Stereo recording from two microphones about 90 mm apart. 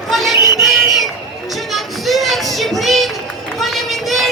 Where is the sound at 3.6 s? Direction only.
Centre (ahead or behind).